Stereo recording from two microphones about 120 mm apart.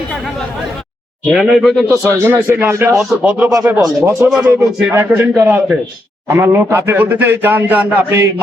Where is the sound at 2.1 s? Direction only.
20° right (ahead or behind).